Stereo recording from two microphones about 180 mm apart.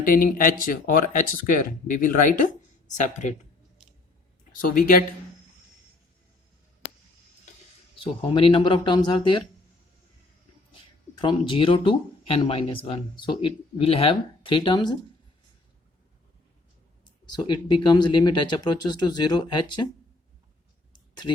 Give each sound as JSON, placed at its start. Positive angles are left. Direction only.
{"t": 0.0, "sound": "speech", "side_deg": 50}
{"t": 4.6, "sound": "speech", "side_deg": 50}
{"t": 7.9, "sound": "speech", "side_deg": 30}
{"t": 11.1, "sound": "speech", "side_deg": 25}
{"t": 17.4, "sound": "speech", "side_deg": 25}